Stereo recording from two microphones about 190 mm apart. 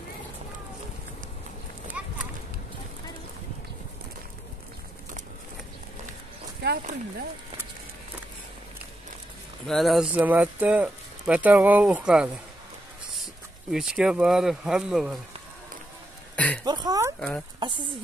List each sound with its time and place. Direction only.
2.0 s clip-clop: 5° right (ahead or behind)
6.6 s speech: 60° right (ahead or behind)
9.7 s speech: centre (ahead or behind)
13.7 s speech: 5° right (ahead or behind)
16.3 s speech: 5° left (ahead or behind)
16.6 s speech: 20° right (ahead or behind)